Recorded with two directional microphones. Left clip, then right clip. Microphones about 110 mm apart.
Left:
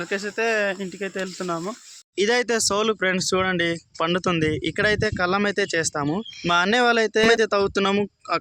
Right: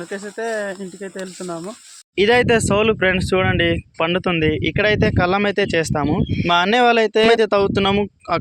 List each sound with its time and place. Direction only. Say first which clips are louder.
0.1 s speech: left 2 dB; 5° left (ahead or behind); by 1.7 s 20° left (ahead or behind)
2.1 s speech: right 6 dB; 35° right (ahead or behind)
2.6 s speech: right 5 dB; 20° right (ahead or behind)
6.1 s speech: right 6 dB; 15° right (ahead or behind)
6.5 s speech: right 4 dB; 30° right (ahead or behind)